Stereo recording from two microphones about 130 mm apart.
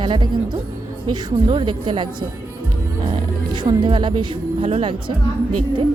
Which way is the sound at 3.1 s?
35° right (ahead or behind).